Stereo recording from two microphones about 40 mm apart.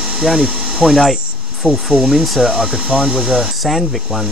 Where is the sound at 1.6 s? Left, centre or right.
Centre.